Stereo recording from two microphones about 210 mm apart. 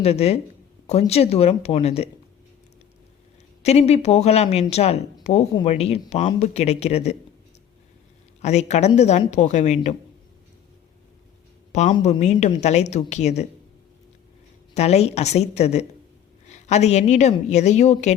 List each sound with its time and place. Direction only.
0.0 s speech: 30° left (ahead or behind)
3.6 s a woman's voice: 30° left (ahead or behind)
8.4 s a woman's voice: 30° left (ahead or behind)
11.7 s a woman's voice: 35° left (ahead or behind)
14.8 s a woman's voice: 30° left (ahead or behind)